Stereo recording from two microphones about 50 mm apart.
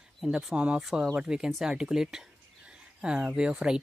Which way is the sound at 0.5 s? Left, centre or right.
Right.